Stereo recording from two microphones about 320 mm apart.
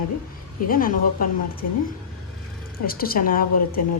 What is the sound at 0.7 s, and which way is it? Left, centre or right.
Speech, left.